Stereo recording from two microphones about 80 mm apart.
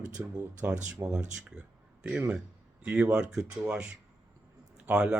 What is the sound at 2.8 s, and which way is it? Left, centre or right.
Speech, centre.